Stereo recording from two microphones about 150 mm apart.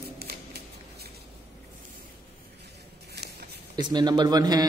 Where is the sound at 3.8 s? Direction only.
30° right (ahead or behind).